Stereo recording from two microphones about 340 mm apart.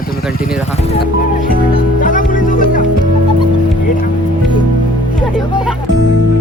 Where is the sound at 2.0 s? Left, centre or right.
Left.